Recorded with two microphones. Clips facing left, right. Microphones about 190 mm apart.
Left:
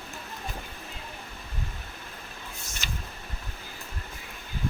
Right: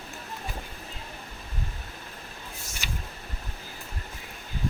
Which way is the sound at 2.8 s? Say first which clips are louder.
Right 1 dB; 10° right (ahead or behind).